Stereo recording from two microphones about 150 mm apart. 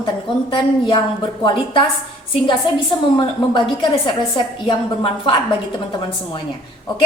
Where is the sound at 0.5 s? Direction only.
30° left (ahead or behind).